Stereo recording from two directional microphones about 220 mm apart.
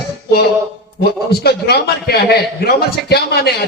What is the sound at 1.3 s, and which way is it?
A man's voice, 45° left (ahead or behind).